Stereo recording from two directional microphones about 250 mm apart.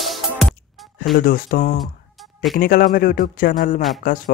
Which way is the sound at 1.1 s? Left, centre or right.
Left.